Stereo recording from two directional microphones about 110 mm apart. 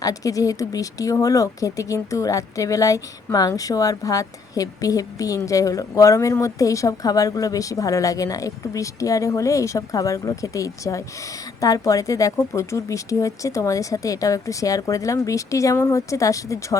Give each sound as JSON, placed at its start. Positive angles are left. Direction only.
{"t": 0.0, "sound": "speech", "side_deg": 30}